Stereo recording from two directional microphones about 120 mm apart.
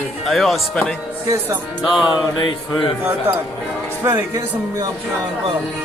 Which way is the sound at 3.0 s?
15° right (ahead or behind).